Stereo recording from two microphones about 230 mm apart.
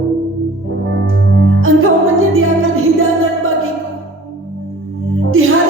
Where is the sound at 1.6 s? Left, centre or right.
Right.